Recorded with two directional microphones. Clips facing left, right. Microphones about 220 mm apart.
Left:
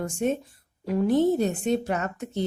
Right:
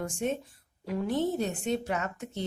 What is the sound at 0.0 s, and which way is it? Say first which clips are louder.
A woman's voice: left 5 dB; 40° left (ahead or behind).